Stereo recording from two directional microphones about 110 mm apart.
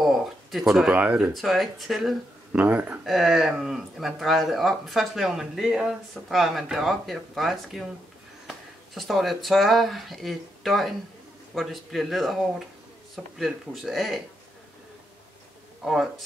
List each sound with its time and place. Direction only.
0.0 s speech: centre (ahead or behind)
1.3 s speech: centre (ahead or behind)
2.5 s speech: 15° right (ahead or behind)
3.1 s speech: centre (ahead or behind)
15.8 s speech: 5° right (ahead or behind)